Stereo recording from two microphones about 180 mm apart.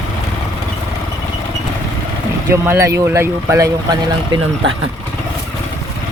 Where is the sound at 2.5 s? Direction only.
15° right (ahead or behind).